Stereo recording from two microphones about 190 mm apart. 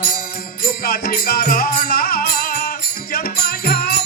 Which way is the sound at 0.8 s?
50° left (ahead or behind).